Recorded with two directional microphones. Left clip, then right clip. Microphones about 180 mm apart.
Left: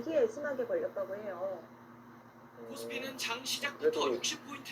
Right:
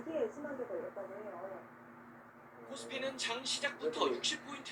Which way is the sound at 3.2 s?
20° left (ahead or behind).